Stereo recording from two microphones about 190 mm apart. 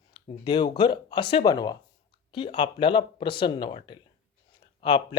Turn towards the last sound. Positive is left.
turn(degrees=25)  # may be behind; listen again after turning